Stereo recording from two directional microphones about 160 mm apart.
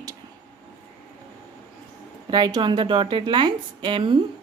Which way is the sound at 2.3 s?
25° right (ahead or behind).